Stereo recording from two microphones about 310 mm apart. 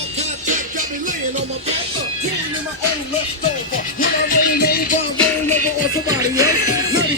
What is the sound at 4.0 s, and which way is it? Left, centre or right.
Music, left.